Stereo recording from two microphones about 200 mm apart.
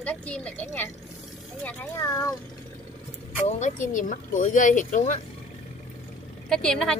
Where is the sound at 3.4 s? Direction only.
35° left (ahead or behind).